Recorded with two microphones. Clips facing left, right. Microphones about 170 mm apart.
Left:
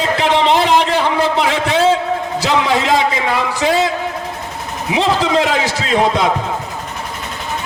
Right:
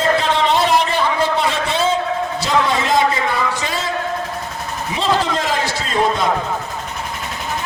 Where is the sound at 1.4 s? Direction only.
85° left.